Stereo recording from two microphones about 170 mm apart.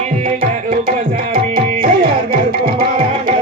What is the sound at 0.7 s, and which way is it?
Tabla, 55° right (ahead or behind).